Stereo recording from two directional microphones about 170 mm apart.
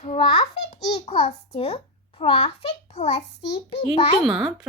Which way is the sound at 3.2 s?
90° left.